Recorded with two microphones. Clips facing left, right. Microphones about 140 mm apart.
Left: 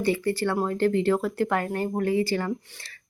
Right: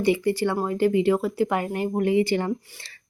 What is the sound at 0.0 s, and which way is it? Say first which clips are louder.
Speech: right 3 dB; 15° right (ahead or behind).